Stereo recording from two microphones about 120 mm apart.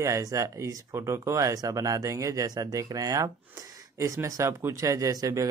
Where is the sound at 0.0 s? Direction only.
25° right (ahead or behind).